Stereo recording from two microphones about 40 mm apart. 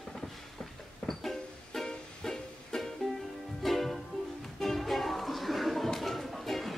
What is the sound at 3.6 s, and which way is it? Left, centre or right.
Ukulele, centre.